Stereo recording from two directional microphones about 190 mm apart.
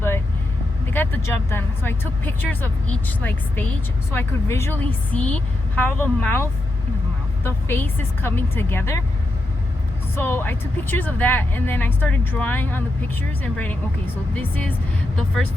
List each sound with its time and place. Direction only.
0.9 s speech: 10° left (ahead or behind)
10.2 s speech: 10° left (ahead or behind)